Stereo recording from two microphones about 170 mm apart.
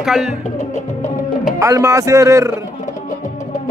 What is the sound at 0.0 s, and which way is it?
Speech, 5° right (ahead or behind).